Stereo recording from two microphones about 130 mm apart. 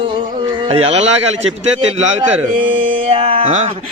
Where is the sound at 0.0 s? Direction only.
40° right (ahead or behind); by 1.5 s 55° right (ahead or behind).